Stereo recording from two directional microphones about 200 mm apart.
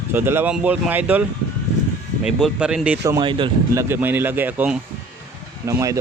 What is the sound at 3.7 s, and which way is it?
Speech, 10° right (ahead or behind).